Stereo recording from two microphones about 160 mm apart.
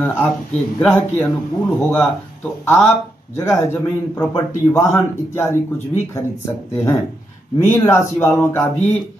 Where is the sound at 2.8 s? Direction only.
20° left (ahead or behind).